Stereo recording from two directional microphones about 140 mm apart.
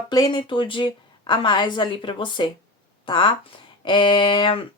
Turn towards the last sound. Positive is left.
turn(degrees=35)  # may be behind; listen again after turning